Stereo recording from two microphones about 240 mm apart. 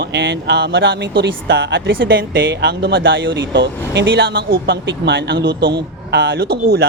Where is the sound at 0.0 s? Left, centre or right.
Right.